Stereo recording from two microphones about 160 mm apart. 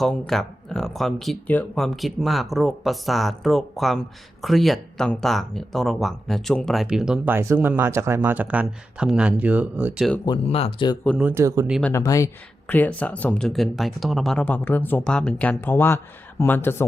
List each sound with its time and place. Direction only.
0.0 s speech: centre (ahead or behind)
10.2 s speech: 35° left (ahead or behind)
11.2 s speech: 15° right (ahead or behind)
11.8 s speech: 15° left (ahead or behind)